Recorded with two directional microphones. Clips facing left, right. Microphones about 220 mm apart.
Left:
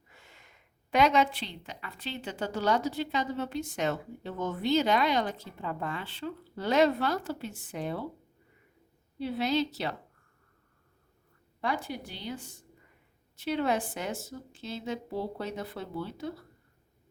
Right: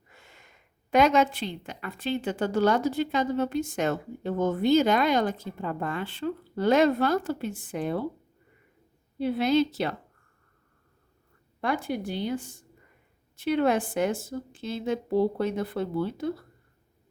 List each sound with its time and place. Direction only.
0.2 s a sound: 50° right (ahead or behind)
0.9 s a woman's voice: 45° right (ahead or behind)
9.1 s a woman's voice: 50° right (ahead or behind)
11.6 s a woman's voice: 50° right (ahead or behind)